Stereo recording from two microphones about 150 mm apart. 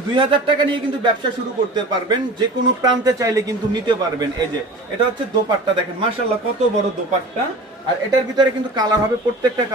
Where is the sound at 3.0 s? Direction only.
25° right (ahead or behind).